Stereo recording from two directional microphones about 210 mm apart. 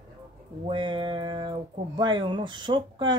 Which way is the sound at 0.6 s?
25° right (ahead or behind).